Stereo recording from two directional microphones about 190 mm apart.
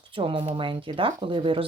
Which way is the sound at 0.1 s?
25° right (ahead or behind).